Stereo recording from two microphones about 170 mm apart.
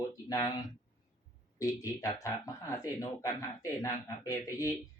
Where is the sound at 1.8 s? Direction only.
20° left (ahead or behind).